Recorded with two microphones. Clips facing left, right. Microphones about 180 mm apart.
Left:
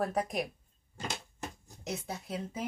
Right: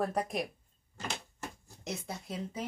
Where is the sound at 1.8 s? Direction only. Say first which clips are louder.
Left 1 dB; centre (ahead or behind).